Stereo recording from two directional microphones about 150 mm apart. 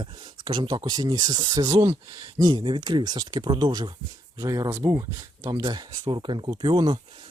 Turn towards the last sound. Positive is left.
turn(degrees=-30)  # may be behind; listen again after turning